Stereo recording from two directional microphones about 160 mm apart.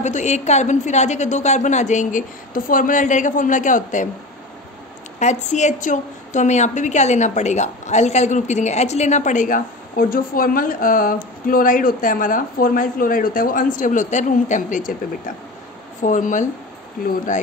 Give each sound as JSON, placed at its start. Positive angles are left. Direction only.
{"t": 0.0, "sound": "a woman's voice", "side_deg": 45}
{"t": 5.2, "sound": "a woman's voice", "side_deg": 45}
{"t": 16.0, "sound": "a woman's voice", "side_deg": 55}
{"t": 17.0, "sound": "speech", "side_deg": 65}